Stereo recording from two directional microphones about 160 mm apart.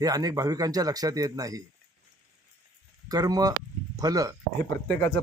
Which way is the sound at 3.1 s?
25° right (ahead or behind).